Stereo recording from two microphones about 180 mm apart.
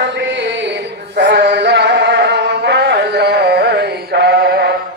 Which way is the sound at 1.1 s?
80° right.